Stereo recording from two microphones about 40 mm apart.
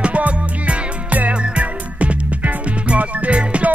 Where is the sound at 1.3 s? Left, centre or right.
Right.